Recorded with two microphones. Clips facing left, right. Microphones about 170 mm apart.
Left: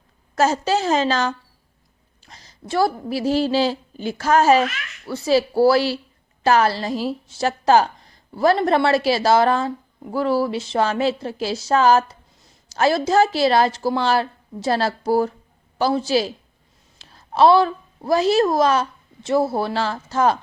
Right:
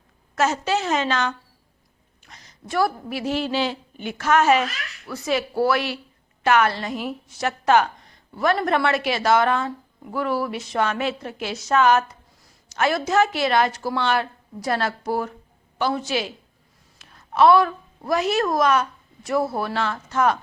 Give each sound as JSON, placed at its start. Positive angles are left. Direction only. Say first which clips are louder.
{"t": 0.3, "sound": "a woman's voice", "louder": "left 3 dB", "side_deg": 35}